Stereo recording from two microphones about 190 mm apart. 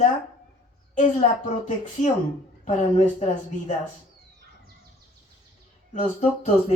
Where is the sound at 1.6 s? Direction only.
40° left (ahead or behind).